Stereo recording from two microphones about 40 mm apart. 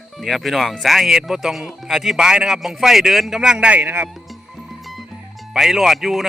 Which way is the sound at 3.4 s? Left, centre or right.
Centre.